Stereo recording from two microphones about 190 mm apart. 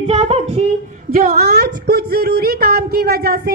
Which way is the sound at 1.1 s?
50° right (ahead or behind).